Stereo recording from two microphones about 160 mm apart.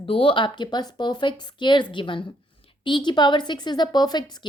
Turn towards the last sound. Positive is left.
turn(degrees=30)  # may be behind; listen again after turning